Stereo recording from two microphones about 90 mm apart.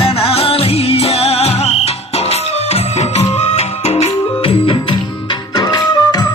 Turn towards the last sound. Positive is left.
turn(degrees=45)  # may be behind; listen again after turning